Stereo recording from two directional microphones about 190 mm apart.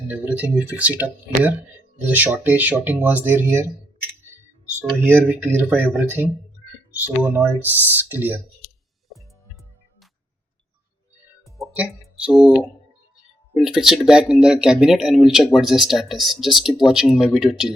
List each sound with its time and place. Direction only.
0.1 s speech: 5° right (ahead or behind)
4.8 s speech: 10° right (ahead or behind)
11.6 s music: centre (ahead or behind)
12.3 s speech: centre (ahead or behind)